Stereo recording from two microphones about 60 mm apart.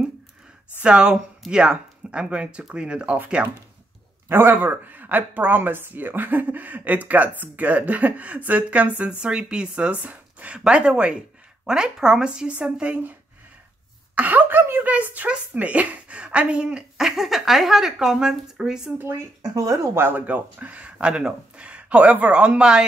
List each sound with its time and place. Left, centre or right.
0.7 s speech: centre
4.3 s speech: right
14.1 s speech: right
14.6 s speech: right
14.9 s speech: right
16.9 s speech: centre
18.9 s speech: right
19.4 s speech: right
20.0 s speech: right; by 22.8 s centre